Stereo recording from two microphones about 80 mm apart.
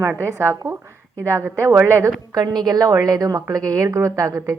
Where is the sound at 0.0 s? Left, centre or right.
Right.